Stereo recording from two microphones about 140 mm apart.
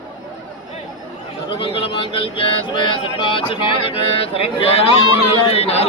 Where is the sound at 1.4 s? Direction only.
35° left (ahead or behind).